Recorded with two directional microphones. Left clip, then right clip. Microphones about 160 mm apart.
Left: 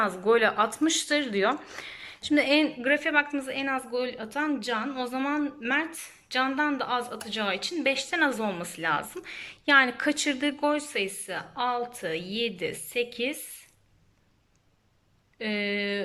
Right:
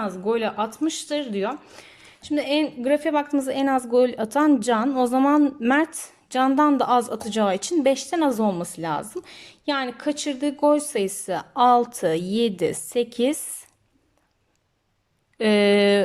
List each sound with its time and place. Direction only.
0.0 s speech: 15° right (ahead or behind)
2.8 s speech: 30° right (ahead or behind)
10.6 s speech: 35° right (ahead or behind)
15.4 s speech: 60° right (ahead or behind)